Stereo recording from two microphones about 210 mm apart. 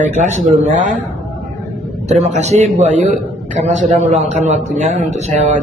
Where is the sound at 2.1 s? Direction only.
30° right (ahead or behind).